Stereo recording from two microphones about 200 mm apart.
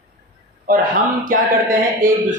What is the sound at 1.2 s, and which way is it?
Speech, 45° right (ahead or behind).